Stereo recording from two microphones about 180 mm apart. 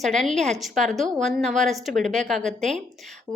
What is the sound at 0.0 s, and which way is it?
A woman's voice, centre (ahead or behind).